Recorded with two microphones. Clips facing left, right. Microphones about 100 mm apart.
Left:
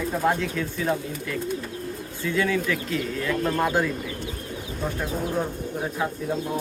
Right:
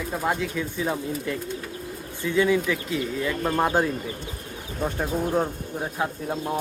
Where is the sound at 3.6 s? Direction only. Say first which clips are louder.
Right 3 dB; 30° right (ahead or behind).